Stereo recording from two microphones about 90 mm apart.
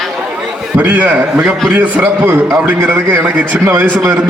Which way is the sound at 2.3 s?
30° right (ahead or behind).